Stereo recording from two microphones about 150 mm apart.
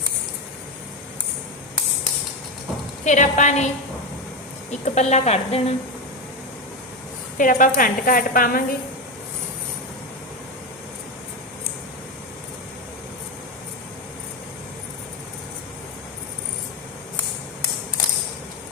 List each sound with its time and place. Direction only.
3.0 s speech: 55° left (ahead or behind)
4.7 s speech: 45° left (ahead or behind)
7.3 s a woman's voice: 60° left (ahead or behind)